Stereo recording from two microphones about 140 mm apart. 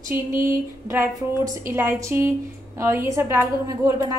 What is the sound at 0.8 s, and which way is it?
A woman's voice, 20° right (ahead or behind).